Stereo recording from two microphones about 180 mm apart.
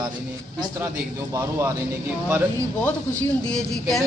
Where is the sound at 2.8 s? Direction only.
10° left (ahead or behind).